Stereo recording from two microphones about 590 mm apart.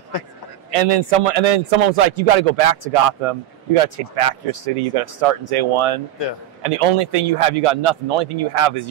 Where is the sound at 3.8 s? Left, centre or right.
Right.